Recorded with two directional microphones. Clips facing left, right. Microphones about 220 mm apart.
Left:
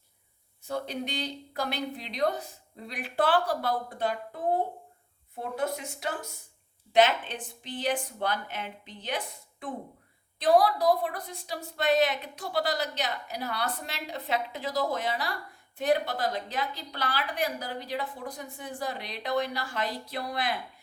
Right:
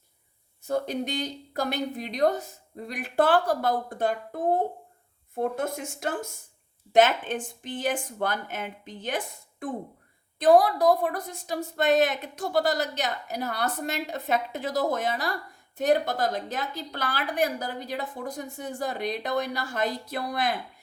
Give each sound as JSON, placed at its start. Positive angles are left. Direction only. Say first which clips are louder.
{"t": 0.7, "sound": "a woman's voice", "louder": "right 5 dB", "side_deg": -45}